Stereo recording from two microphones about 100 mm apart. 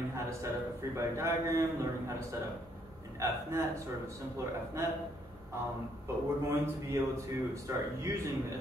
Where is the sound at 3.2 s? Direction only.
30° right (ahead or behind).